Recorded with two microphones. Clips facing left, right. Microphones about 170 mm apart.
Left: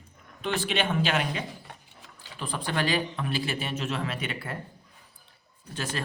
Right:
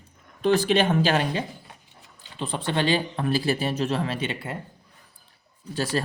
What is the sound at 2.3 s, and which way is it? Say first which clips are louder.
Speech: right 4 dB; 25° right (ahead or behind).